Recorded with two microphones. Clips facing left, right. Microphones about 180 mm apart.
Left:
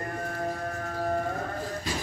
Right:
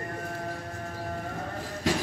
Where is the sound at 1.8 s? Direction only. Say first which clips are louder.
Right 9 dB; 90° right.